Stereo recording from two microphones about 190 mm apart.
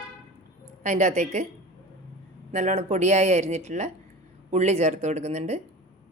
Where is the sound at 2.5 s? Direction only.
35° right (ahead or behind).